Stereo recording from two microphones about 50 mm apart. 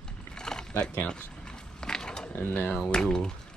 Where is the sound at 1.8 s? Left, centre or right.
Centre.